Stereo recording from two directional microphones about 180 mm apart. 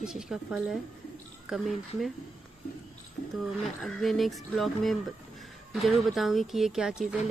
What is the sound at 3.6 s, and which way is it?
Speech, centre (ahead or behind).